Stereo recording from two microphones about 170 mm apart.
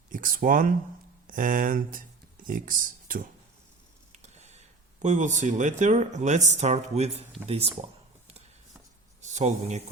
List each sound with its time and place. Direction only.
0.1 s speech: 50° right (ahead or behind)
4.1 s a sound: 40° right (ahead or behind)
5.0 s speech: 45° right (ahead or behind)
9.2 s speech: 45° right (ahead or behind)